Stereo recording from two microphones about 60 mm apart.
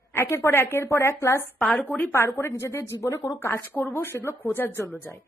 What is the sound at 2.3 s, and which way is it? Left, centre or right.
Speech, left.